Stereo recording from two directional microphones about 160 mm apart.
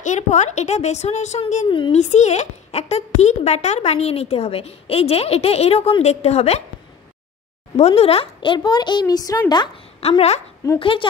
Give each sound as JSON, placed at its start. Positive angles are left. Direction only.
{"t": 0.0, "sound": "a woman's voice", "side_deg": 45}
{"t": 7.7, "sound": "speech", "side_deg": 40}
{"t": 9.9, "sound": "a woman's voice", "side_deg": 40}